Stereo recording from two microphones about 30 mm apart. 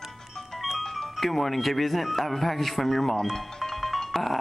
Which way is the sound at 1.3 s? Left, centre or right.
Centre.